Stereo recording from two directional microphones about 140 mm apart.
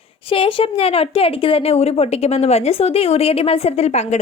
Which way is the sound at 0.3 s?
40° left (ahead or behind).